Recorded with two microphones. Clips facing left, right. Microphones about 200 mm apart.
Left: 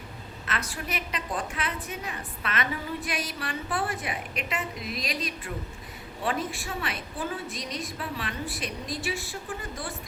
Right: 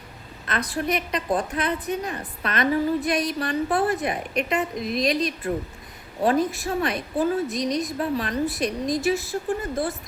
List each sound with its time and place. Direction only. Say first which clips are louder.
0.4 s a woman's voice: right 8 dB; 35° right (ahead or behind)